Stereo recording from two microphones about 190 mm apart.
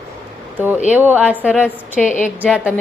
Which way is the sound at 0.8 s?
10° right (ahead or behind).